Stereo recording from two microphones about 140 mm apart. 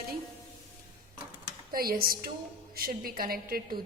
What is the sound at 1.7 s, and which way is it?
A woman's voice, 90° right.